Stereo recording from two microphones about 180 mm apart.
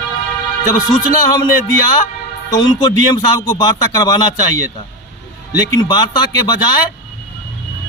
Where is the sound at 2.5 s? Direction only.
25° left (ahead or behind).